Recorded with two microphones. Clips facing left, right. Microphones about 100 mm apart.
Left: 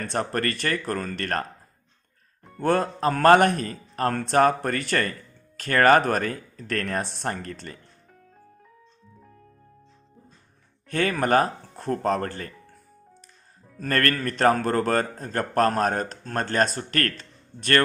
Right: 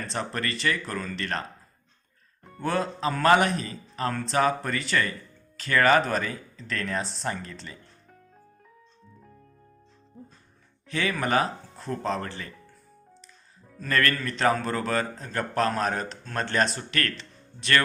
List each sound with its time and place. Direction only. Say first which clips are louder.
0.0 s a man's voice: left 5 dB; 50° left (ahead or behind)
2.6 s a man's voice: left 5 dB; 50° left (ahead or behind)
10.8 s a man's voice: left 4 dB; 50° left (ahead or behind)
13.7 s a man's voice: left 1 dB; 50° left (ahead or behind)